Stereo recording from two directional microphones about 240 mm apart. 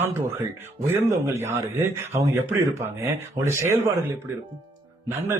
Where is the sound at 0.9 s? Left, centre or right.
Centre.